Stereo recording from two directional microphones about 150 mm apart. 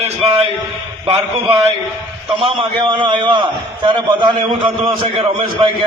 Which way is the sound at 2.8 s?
35° right (ahead or behind).